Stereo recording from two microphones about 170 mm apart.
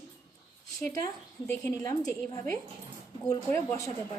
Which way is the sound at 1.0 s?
10° left (ahead or behind).